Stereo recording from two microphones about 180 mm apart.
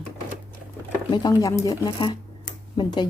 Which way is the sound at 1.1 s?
20° left (ahead or behind).